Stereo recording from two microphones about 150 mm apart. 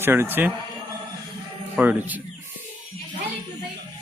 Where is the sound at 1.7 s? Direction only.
10° right (ahead or behind).